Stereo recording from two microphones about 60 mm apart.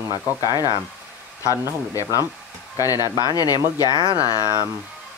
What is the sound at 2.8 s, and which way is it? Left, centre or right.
Speech, left.